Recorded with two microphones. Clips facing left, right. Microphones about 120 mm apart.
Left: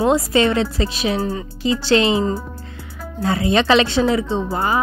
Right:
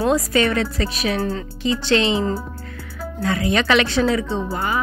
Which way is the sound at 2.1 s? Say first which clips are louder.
Left 2 dB; 15° left (ahead or behind).